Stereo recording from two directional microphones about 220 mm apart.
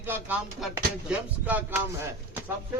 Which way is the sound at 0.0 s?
10° right (ahead or behind).